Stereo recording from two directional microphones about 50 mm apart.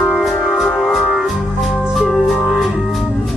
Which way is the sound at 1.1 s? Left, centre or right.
Centre.